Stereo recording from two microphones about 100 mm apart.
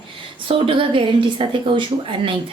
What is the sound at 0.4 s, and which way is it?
A woman's voice, 65° right (ahead or behind).